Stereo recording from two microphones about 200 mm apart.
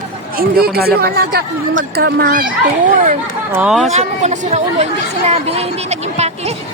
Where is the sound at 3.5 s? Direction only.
5° right (ahead or behind).